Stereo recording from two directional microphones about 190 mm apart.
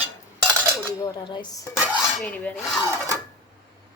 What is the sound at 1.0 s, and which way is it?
Speech, 20° left (ahead or behind).